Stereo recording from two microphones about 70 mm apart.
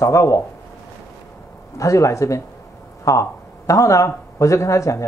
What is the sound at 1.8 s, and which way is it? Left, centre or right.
Speech, left.